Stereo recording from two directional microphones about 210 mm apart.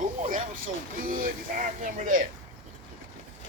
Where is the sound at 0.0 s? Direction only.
40° right (ahead or behind).